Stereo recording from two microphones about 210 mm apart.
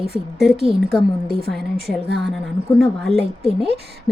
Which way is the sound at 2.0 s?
55° right (ahead or behind).